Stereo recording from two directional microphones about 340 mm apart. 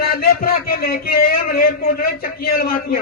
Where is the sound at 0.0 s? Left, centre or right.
Left.